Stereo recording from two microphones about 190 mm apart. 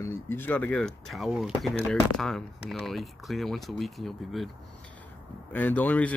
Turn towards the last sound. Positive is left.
turn(degrees=10)  # may be behind; listen again after turning